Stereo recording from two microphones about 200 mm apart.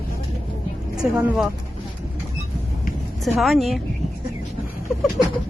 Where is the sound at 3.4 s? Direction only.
Centre (ahead or behind).